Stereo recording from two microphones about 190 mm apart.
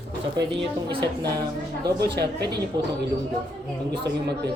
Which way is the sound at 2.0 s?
60° right (ahead or behind).